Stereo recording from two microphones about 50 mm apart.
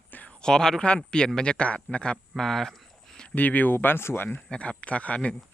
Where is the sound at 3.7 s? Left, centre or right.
Left.